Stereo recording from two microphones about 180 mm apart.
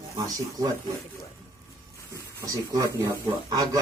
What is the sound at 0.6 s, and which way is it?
Speech, 20° right (ahead or behind).